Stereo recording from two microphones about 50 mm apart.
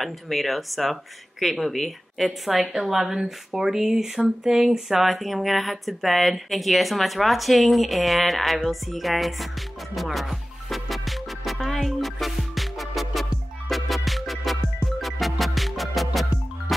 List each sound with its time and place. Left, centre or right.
0.0 s a woman's voice: centre
8.6 s music: centre